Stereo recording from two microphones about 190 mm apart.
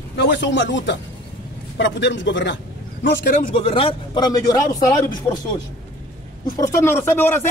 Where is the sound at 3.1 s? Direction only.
50° left (ahead or behind).